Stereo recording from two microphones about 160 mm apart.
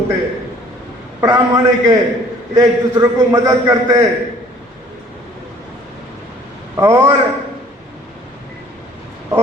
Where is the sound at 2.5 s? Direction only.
25° right (ahead or behind).